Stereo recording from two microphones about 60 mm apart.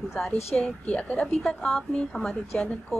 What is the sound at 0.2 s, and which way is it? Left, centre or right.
A woman's voice, centre.